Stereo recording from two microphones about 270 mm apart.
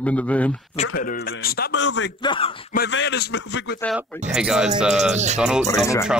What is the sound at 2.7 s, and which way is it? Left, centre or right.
A man's voice, left.